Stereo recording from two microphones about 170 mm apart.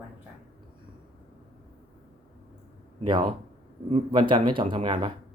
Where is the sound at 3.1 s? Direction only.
25° right (ahead or behind).